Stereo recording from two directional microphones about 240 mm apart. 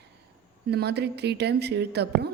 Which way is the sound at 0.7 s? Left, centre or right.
Right.